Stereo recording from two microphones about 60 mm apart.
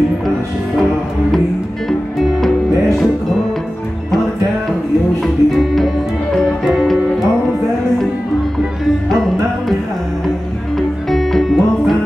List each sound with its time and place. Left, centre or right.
1.9 s music: centre
5.2 s music: centre
9.1 s music: centre
11.1 s music: centre